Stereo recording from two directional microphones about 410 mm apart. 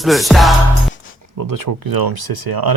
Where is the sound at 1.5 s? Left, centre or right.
Right.